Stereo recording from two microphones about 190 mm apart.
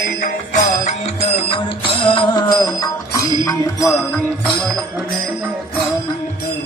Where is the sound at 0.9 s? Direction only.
30° left (ahead or behind).